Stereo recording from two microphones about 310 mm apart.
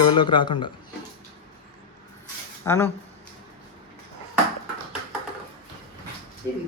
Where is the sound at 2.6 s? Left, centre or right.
Centre.